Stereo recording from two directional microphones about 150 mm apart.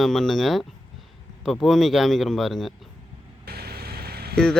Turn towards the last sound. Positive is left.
turn(degrees=5)  # may be behind; listen again after turning